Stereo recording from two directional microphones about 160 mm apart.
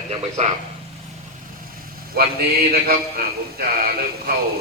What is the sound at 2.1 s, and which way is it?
A man's voice, 75° right (ahead or behind).